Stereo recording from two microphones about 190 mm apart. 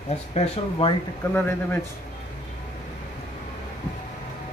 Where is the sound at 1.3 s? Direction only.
10° left (ahead or behind).